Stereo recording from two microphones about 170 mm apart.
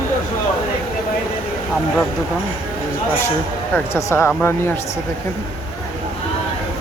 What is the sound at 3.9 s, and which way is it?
Speech, 15° left (ahead or behind).